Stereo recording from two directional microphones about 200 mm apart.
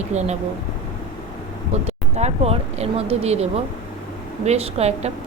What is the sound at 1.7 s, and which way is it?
Speech, 35° right (ahead or behind).